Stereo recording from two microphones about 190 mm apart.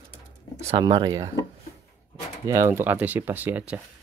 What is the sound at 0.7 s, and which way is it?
Speech, 25° right (ahead or behind).